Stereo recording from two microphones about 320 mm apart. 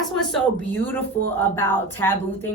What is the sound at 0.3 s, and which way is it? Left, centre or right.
A woman's voice, centre.